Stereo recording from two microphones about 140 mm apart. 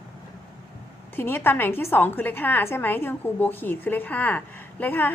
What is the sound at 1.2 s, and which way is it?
A woman's voice, 15° left (ahead or behind).